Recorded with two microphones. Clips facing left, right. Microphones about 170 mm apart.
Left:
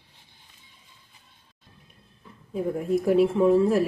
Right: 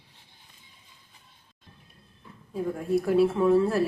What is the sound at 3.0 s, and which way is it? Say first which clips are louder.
Speech: left 2 dB; 20° left (ahead or behind).